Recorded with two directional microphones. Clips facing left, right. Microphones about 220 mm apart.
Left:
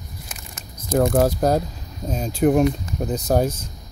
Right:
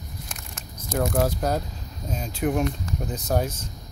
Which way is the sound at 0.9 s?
40° left (ahead or behind).